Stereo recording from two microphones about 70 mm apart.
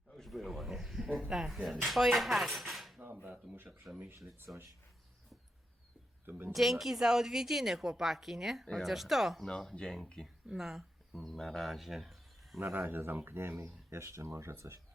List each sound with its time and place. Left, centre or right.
0.1 s speech: centre
3.2 s a sound: right
6.2 s speech: right
6.5 s a woman's voice: centre
9.5 s speech: centre
10.2 s speech: centre
11.1 s speech: centre
12.5 s speech: right